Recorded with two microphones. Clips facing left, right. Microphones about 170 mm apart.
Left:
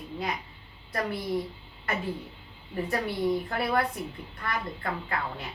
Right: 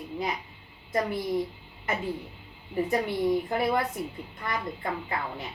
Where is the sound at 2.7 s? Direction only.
15° right (ahead or behind).